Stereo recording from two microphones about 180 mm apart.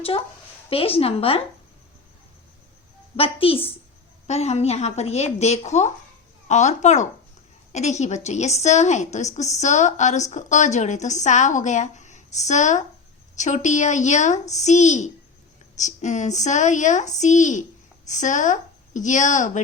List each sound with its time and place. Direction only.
0.7 s a woman's voice: 30° left (ahead or behind)
3.2 s a woman's voice: 30° left (ahead or behind)